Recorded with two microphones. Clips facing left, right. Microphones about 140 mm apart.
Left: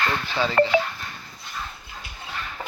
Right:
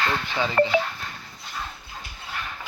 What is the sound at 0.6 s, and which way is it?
Speech, 75° left (ahead or behind).